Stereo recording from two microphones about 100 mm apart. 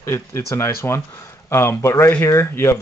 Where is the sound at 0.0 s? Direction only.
25° left (ahead or behind).